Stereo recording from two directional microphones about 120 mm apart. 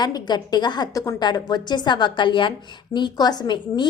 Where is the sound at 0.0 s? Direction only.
35° left (ahead or behind).